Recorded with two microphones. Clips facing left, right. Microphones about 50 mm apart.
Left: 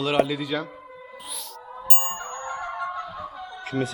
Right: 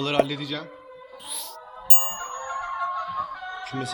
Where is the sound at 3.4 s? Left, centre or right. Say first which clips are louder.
Right 2 dB; right.